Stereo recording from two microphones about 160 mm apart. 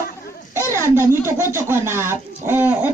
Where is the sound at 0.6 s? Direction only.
15° left (ahead or behind).